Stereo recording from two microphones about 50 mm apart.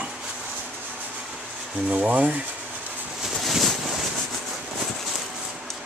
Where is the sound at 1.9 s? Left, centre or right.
Right.